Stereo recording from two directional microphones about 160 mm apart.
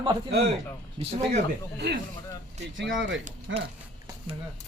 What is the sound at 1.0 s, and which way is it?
Speech, 45° right (ahead or behind).